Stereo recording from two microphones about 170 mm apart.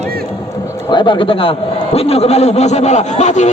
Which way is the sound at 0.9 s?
30° left (ahead or behind).